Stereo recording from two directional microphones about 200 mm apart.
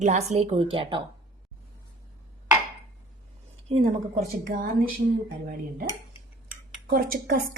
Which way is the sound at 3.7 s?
35° right (ahead or behind).